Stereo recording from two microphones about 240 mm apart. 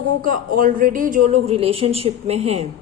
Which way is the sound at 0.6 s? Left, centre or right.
Right.